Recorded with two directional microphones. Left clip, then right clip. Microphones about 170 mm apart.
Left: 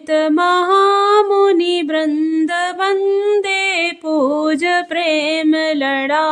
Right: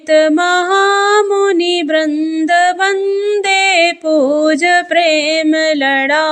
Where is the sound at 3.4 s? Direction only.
Centre (ahead or behind).